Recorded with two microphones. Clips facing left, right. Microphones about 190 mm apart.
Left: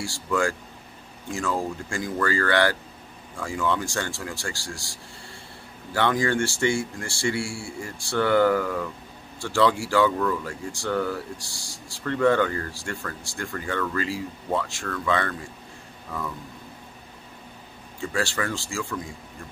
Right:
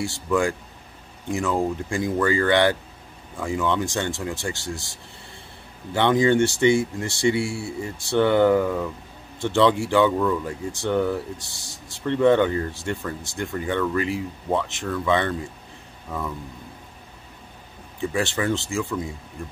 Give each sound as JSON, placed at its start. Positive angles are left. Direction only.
{"t": 0.0, "sound": "speech", "side_deg": -20}
{"t": 5.9, "sound": "speech", "side_deg": -20}
{"t": 18.0, "sound": "speech", "side_deg": -20}